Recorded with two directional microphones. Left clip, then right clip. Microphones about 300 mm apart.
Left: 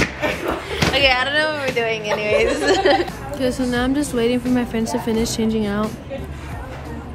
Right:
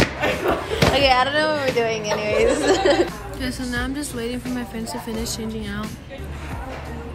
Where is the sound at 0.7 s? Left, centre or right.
Centre.